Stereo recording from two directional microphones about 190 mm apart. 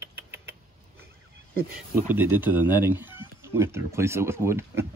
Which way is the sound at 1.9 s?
10° right (ahead or behind).